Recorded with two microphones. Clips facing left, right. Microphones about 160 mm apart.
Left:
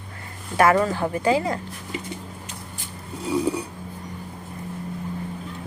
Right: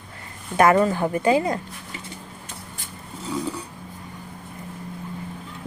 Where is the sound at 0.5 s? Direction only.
20° right (ahead or behind).